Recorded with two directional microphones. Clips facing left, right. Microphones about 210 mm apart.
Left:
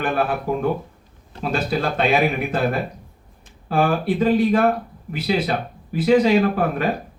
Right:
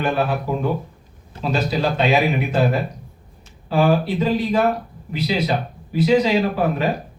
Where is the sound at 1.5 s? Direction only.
55° left (ahead or behind).